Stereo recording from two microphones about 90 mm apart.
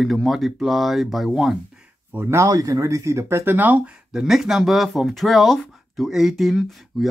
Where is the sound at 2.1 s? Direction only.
30° right (ahead or behind).